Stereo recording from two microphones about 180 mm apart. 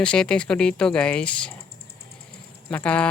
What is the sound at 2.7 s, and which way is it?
Speech, 5° left (ahead or behind).